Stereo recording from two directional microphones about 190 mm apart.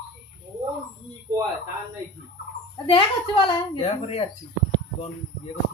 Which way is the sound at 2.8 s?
30° left (ahead or behind).